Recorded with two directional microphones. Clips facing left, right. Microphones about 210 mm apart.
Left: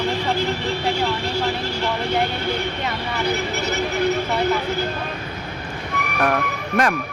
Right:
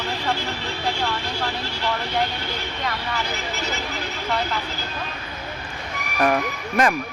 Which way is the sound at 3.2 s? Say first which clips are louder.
Left 7 dB; 60° left (ahead or behind).